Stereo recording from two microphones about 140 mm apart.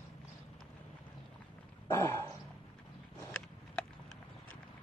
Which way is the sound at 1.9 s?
20° left (ahead or behind).